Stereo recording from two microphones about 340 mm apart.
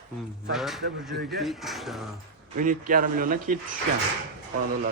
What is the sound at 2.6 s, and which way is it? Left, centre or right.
Speech, right.